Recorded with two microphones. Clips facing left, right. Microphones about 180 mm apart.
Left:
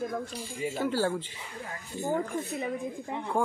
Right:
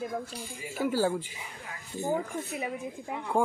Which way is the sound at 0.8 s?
10° right (ahead or behind).